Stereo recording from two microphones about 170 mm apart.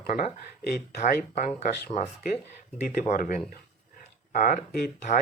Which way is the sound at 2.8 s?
55° left (ahead or behind).